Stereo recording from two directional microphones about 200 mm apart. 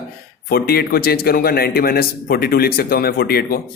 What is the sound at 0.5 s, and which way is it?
A man's voice, 50° left (ahead or behind).